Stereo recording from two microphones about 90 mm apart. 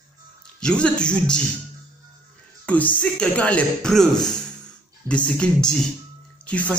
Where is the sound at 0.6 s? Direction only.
10° left (ahead or behind).